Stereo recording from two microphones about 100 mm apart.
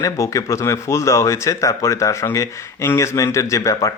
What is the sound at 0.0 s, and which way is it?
Speech, 30° left (ahead or behind).